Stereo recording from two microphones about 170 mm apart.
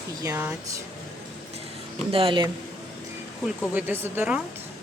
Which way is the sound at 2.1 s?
30° right (ahead or behind).